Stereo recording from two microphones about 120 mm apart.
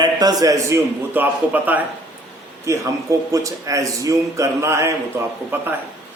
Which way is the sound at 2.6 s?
25° right (ahead or behind).